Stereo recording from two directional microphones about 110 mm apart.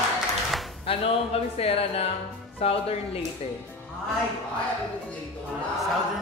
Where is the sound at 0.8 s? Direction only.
60° left (ahead or behind).